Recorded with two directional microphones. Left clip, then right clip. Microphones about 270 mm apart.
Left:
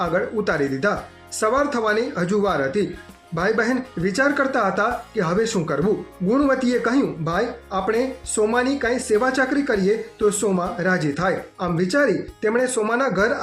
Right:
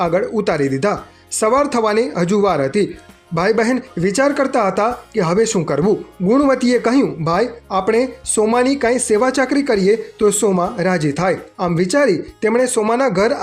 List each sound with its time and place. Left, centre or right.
0.0 s speech: right